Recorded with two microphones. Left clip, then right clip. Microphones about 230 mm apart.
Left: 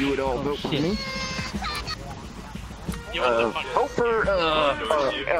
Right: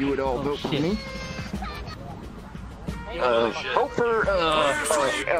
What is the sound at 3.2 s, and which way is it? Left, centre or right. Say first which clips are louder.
Speech: even; centre.